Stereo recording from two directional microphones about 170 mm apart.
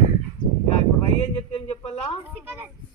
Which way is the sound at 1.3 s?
35° left (ahead or behind).